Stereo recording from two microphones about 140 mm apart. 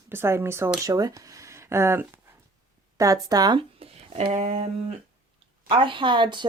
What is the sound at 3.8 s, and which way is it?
Speech, 45° right (ahead or behind).